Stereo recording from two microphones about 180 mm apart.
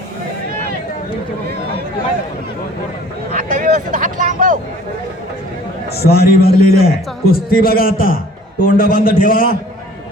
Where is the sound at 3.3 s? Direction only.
50° right (ahead or behind).